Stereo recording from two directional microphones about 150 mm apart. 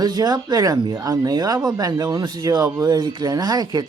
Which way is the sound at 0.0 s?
25° right (ahead or behind).